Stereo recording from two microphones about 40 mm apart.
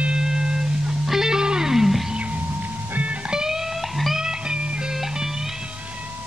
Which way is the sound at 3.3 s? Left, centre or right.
Centre.